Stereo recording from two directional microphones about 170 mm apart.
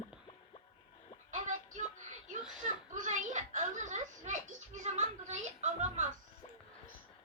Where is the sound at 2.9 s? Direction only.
50° right (ahead or behind).